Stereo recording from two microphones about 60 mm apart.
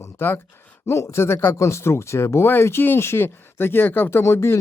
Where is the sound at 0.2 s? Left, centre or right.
Left.